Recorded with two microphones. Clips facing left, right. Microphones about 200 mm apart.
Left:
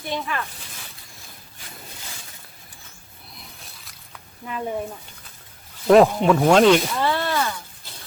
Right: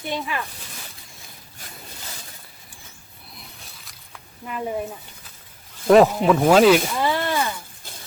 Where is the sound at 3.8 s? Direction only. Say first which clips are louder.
Even; centre (ahead or behind).